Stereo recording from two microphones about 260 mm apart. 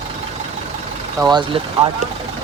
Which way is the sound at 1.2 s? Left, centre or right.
Centre.